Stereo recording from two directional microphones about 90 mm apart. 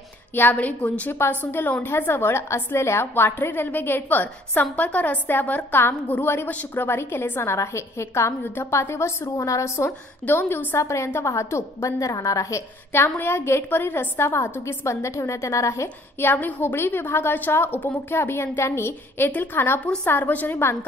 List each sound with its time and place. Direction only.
0.3 s a woman's voice: 20° left (ahead or behind)
16.3 s a woman's voice: 20° left (ahead or behind)